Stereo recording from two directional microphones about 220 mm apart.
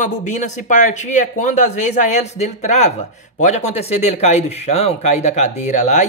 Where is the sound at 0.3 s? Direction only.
35° left (ahead or behind).